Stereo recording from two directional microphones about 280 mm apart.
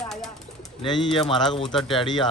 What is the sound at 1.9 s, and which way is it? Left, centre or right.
Speech, centre.